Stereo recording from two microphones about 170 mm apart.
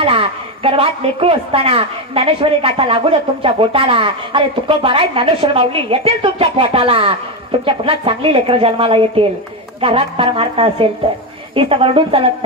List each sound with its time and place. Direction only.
0.0 s a woman's voice: 35° right (ahead or behind)